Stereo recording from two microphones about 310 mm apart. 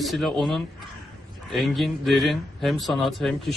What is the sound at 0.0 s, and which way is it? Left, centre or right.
Speech, centre.